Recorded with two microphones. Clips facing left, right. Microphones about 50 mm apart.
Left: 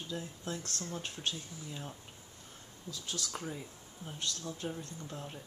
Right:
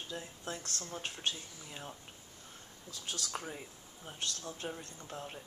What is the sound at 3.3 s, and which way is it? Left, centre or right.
Speech, centre.